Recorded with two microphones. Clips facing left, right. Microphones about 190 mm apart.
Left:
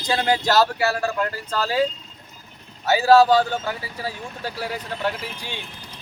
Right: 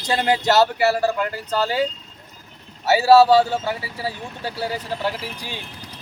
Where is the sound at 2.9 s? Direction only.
5° right (ahead or behind).